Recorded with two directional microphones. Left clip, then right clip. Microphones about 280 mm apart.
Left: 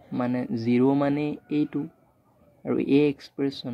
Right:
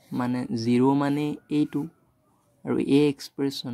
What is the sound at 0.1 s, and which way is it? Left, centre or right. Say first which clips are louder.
Speech: left 1 dB; right.